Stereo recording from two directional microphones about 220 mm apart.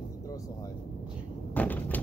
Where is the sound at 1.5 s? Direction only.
5° left (ahead or behind).